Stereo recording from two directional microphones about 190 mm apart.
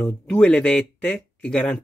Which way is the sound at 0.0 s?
5° left (ahead or behind).